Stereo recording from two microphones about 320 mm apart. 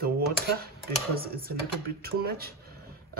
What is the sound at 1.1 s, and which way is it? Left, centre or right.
Speech, right.